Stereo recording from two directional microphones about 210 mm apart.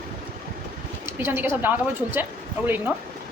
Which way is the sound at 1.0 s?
10° right (ahead or behind).